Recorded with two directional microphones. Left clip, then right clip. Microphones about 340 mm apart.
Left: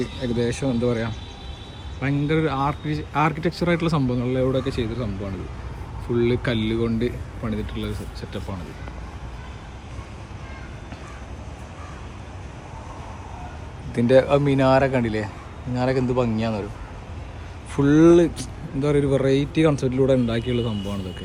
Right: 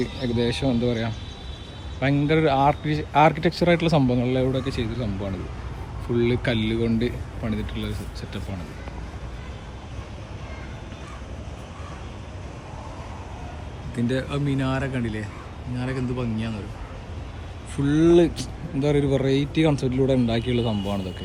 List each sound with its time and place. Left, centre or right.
0.0 s a man's voice: centre
14.5 s speech: centre
17.8 s a man's voice: centre